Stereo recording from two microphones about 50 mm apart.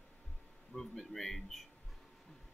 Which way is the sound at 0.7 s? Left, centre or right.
Centre.